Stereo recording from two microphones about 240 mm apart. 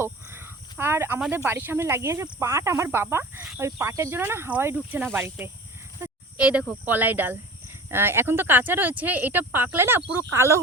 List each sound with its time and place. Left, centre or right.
0.0 s a sound: centre
1.5 s cricket: centre
6.0 s speech: centre
7.9 s cricket: centre